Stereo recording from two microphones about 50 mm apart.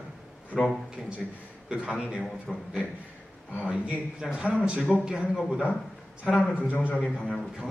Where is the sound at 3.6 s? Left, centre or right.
Right.